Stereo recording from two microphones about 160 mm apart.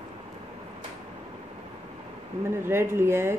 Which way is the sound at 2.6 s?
15° right (ahead or behind).